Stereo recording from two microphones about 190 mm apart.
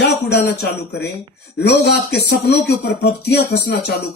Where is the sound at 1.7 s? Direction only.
60° left (ahead or behind).